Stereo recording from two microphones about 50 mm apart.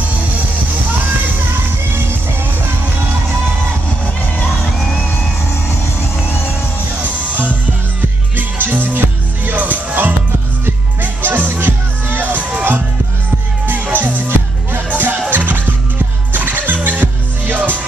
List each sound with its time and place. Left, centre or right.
8.4 s music: right
13.9 s music: right